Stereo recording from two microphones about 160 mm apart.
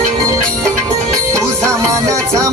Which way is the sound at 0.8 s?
20° right (ahead or behind).